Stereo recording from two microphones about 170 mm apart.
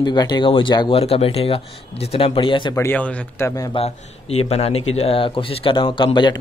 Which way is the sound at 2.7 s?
10° left (ahead or behind).